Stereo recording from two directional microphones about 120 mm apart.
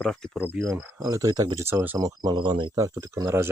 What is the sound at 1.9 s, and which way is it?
Speech, 30° right (ahead or behind).